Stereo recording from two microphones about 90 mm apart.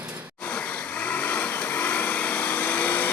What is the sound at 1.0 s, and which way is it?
Vehicle, 15° left (ahead or behind).